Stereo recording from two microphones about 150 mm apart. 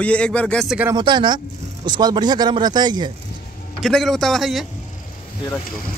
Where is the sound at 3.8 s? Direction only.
Centre (ahead or behind).